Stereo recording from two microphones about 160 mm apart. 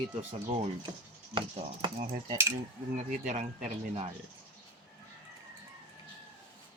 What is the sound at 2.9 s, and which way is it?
Speech, 45° right (ahead or behind).